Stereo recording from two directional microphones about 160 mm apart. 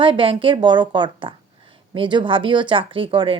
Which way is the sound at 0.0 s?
30° right (ahead or behind).